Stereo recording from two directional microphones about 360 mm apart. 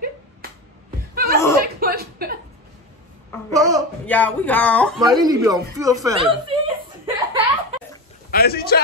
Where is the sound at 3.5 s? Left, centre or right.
Centre.